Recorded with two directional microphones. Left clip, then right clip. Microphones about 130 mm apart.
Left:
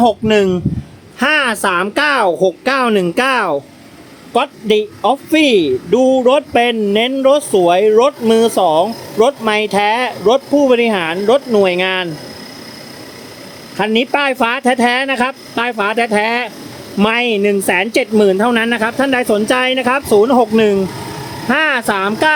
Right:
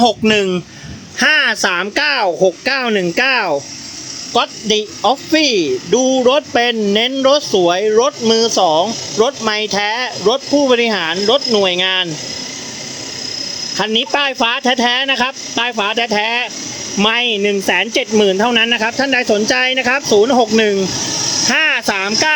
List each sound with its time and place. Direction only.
0.0 s speech: 10° right (ahead or behind)
1.2 s speech: 10° left (ahead or behind)
13.7 s speech: 15° left (ahead or behind)
21.5 s speech: centre (ahead or behind)